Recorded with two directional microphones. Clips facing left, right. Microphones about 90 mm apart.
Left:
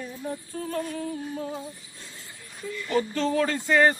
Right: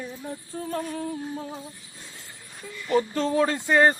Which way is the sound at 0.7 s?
30° right (ahead or behind).